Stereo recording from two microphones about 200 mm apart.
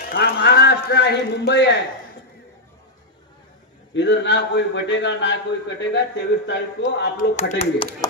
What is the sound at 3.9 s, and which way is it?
A man's voice, 60° left (ahead or behind).